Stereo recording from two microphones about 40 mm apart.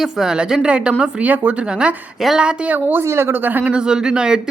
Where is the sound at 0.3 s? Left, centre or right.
Centre.